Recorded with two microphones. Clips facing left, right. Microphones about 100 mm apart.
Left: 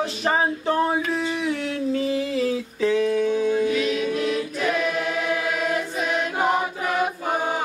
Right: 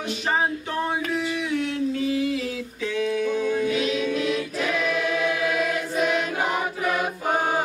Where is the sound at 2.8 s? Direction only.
35° left (ahead or behind).